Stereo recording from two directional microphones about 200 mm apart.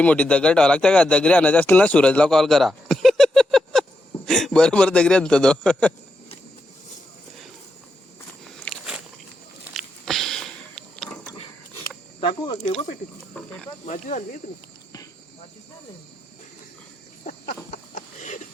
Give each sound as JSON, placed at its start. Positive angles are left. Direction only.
{"t": 0.0, "sound": "a man's voice", "side_deg": 5}
{"t": 8.6, "sound": "biting", "side_deg": 0}
{"t": 9.7, "sound": "a sound", "side_deg": 0}
{"t": 12.2, "sound": "speech", "side_deg": 25}
{"t": 13.3, "sound": "speech", "side_deg": 5}
{"t": 13.8, "sound": "speech", "side_deg": 40}
{"t": 17.7, "sound": "a sound", "side_deg": 35}